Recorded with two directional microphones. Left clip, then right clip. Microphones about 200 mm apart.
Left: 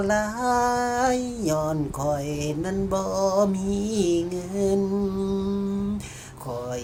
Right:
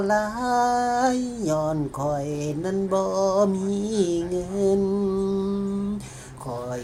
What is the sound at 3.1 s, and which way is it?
Speech, 25° left (ahead or behind).